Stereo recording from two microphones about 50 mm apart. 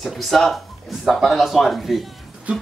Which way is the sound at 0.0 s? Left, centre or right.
Centre.